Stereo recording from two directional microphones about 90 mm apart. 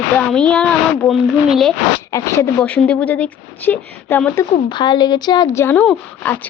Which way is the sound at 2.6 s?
15° left (ahead or behind).